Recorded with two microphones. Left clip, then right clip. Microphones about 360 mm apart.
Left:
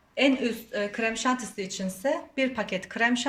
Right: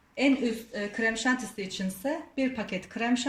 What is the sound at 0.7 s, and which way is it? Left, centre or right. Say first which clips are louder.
Speech: left 1 dB; left.